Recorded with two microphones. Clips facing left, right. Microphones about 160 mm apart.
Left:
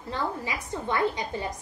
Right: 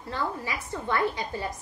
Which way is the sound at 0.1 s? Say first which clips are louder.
Left 1 dB; 20° left (ahead or behind).